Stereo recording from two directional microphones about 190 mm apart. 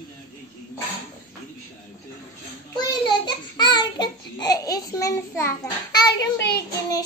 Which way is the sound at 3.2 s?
20° left (ahead or behind).